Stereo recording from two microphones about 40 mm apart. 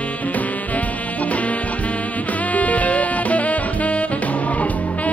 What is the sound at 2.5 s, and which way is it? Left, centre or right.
Music, left.